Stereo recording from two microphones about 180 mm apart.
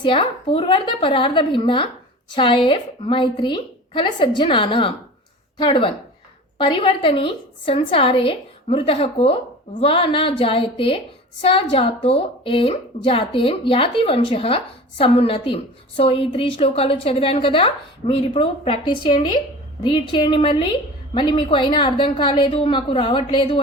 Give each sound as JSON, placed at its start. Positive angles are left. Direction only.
{"t": 0.0, "sound": "a woman's voice", "side_deg": 30}